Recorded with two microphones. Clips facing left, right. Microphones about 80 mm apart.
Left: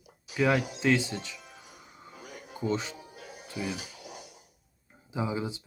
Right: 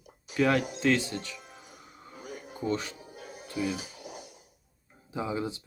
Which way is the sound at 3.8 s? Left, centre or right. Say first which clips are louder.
Right 2 dB; right.